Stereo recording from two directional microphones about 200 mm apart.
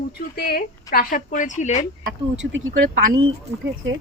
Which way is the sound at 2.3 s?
65° right (ahead or behind).